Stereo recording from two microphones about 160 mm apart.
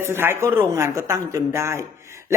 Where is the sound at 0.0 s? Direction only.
15° right (ahead or behind).